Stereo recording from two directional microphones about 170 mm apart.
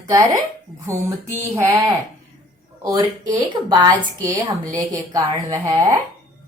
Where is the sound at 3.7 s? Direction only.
25° right (ahead or behind).